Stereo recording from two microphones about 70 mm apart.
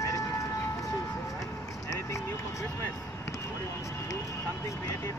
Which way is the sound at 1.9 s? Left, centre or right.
Left.